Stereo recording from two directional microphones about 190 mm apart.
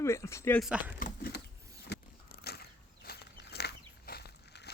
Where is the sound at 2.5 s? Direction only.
55° left (ahead or behind).